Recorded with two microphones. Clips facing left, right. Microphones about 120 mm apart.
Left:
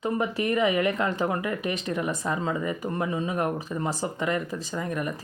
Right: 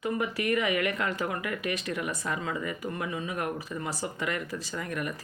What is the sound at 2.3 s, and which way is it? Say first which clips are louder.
Speech: left 5 dB; 30° left (ahead or behind).